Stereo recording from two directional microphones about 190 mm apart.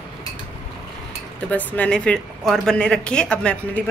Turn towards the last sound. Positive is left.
turn(degrees=5)  # may be behind; listen again after turning